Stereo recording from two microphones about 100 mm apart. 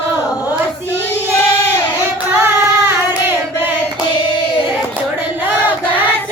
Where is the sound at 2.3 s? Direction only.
25° right (ahead or behind).